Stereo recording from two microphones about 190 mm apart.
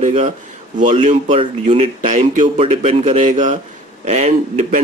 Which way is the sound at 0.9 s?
30° right (ahead or behind).